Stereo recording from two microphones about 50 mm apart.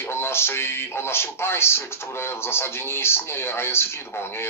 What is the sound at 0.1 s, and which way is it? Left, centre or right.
A man's voice, left.